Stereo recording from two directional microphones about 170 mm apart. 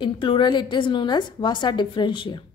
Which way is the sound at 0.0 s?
30° left (ahead or behind).